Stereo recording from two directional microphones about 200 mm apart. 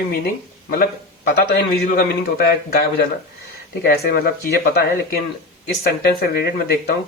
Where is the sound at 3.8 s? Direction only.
50° left (ahead or behind).